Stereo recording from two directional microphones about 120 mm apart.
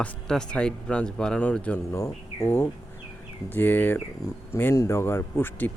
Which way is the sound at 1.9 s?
25° left (ahead or behind).